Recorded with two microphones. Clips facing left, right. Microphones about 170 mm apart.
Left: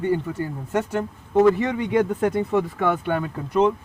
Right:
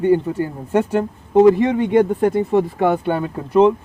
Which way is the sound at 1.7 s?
45° right (ahead or behind).